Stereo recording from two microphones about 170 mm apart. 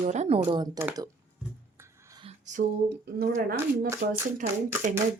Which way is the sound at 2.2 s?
45° right (ahead or behind).